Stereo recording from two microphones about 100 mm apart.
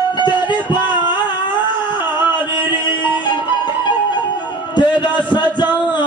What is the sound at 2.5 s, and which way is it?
Music, 50° left (ahead or behind).